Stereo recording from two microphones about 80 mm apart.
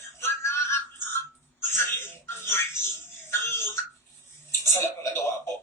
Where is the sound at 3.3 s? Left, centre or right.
Left.